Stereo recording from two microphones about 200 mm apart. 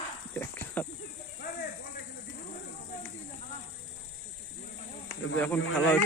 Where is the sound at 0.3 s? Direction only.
10° left (ahead or behind).